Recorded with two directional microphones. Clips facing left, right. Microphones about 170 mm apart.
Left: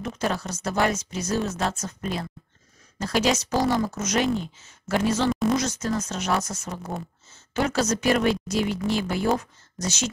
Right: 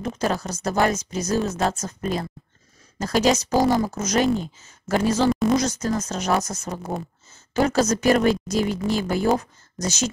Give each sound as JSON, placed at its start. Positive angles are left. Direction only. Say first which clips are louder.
{"t": 0.0, "sound": "speech", "louder": "right 3 dB", "side_deg": -40}
{"t": 5.3, "sound": "a sound", "louder": "right 3 dB", "side_deg": 0}
{"t": 5.6, "sound": "speech", "louder": "right 3 dB", "side_deg": -40}